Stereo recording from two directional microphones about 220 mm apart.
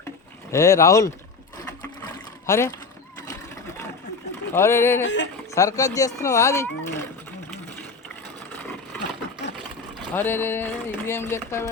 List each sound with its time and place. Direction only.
0.5 s speech: 15° left (ahead or behind)
2.5 s speech: 15° left (ahead or behind)
3.2 s sewing machine: 10° left (ahead or behind)
4.5 s speech: 10° left (ahead or behind)
5.0 s speech: 55° left (ahead or behind)
5.5 s speech: 15° left (ahead or behind)
10.2 s speech: 10° left (ahead or behind)